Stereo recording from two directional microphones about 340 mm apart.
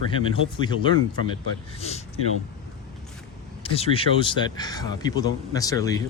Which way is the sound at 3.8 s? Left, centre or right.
Centre.